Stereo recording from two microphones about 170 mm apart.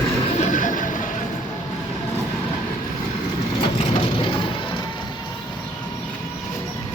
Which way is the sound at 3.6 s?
30° left (ahead or behind).